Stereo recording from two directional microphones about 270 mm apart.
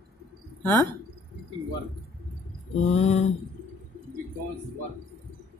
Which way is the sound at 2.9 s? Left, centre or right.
Left.